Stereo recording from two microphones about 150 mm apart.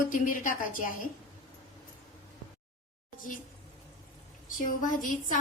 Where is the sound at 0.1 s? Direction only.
65° left (ahead or behind).